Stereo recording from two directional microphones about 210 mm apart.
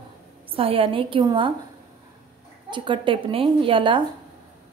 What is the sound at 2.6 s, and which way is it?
A woman's voice, 20° right (ahead or behind).